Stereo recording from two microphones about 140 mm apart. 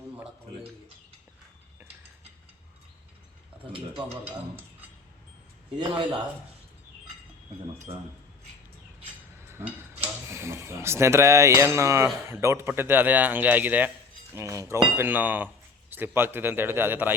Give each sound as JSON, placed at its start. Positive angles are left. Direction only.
{"t": 3.7, "sound": "speech", "side_deg": -40}
{"t": 5.9, "sound": "speech", "side_deg": -35}
{"t": 9.4, "sound": "a man's voice", "side_deg": -15}